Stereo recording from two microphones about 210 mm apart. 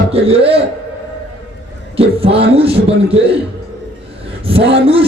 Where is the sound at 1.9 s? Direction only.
25° right (ahead or behind).